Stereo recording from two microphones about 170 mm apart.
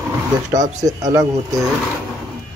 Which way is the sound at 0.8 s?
20° right (ahead or behind).